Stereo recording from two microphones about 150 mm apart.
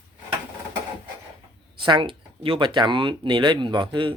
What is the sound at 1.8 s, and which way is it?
Speech, 35° right (ahead or behind).